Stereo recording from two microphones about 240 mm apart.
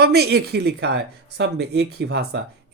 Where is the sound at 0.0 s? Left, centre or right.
Right.